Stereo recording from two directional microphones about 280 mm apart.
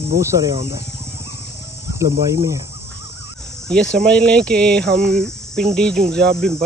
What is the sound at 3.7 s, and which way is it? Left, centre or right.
Speech, centre.